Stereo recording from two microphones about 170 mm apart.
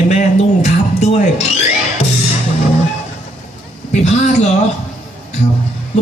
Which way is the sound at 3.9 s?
40° left (ahead or behind).